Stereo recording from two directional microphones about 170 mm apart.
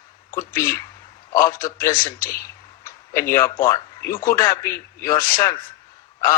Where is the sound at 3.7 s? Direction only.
15° left (ahead or behind).